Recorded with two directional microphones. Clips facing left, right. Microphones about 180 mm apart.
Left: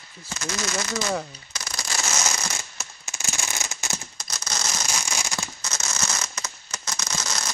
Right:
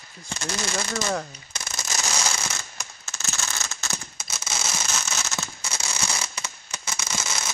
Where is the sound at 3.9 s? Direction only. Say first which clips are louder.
Left 1 dB; 5° right (ahead or behind).